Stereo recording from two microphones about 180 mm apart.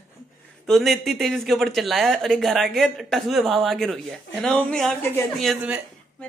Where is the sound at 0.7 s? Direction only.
Centre (ahead or behind).